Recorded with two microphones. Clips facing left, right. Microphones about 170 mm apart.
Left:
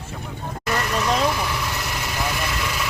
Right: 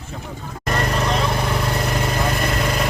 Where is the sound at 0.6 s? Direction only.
50° right (ahead or behind).